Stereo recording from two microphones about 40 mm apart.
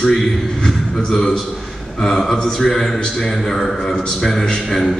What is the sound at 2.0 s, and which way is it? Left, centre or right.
A man's voice, centre.